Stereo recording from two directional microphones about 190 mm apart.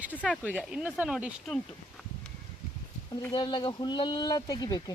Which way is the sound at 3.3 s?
25° left (ahead or behind).